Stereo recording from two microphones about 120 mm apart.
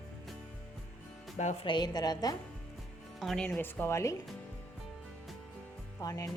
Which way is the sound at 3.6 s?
20° left (ahead or behind).